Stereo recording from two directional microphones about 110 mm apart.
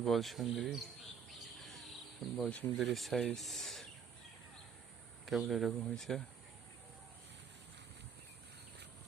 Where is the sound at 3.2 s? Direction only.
5° left (ahead or behind).